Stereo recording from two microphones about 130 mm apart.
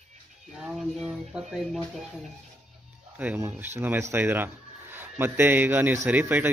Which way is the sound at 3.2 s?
15° right (ahead or behind).